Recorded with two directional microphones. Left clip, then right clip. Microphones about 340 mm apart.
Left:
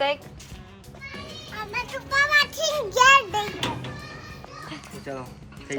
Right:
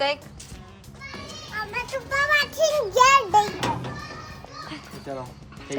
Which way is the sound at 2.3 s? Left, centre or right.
Centre.